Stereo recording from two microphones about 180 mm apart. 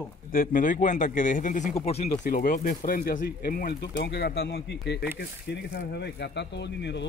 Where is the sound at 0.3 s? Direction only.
50° left (ahead or behind).